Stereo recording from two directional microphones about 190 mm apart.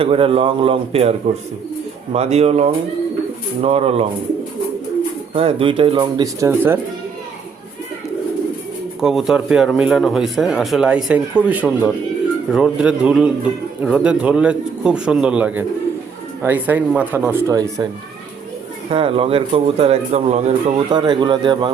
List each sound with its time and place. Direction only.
0.0 s speech: 30° right (ahead or behind)
2.1 s a man's voice: 35° right (ahead or behind)
5.3 s speech: 30° right (ahead or behind); by 6.7 s 10° right (ahead or behind)
9.0 s speech: centre (ahead or behind); by 17.8 s 20° right (ahead or behind)
18.9 s a man's voice: 30° right (ahead or behind)
20.9 s speech: 25° right (ahead or behind)